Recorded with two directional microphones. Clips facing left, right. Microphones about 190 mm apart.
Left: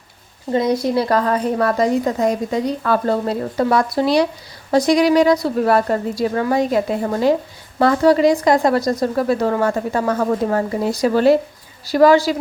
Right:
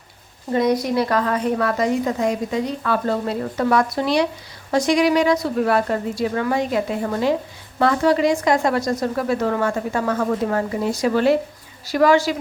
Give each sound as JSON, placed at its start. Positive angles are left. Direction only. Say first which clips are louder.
{"t": 0.5, "sound": "a woman's voice", "louder": "left 1 dB", "side_deg": 25}